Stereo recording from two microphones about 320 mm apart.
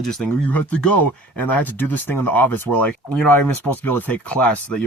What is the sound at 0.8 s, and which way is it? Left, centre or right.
Speech, left.